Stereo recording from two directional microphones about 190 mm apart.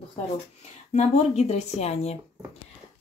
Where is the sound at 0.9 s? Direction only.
35° left (ahead or behind).